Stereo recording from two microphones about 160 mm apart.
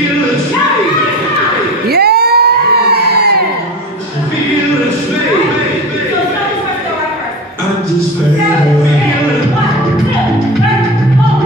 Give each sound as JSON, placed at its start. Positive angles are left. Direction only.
{"t": 1.9, "sound": "crowd", "side_deg": -80}